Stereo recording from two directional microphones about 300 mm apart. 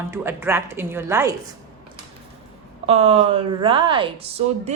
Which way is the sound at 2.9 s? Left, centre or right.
Centre.